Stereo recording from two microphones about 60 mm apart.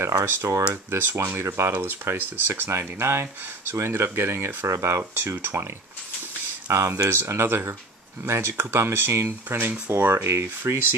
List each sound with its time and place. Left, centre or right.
0.2 s speech: right
0.8 s speech: right
4.6 s speech: right
6.7 s speech: right
9.6 s speech: right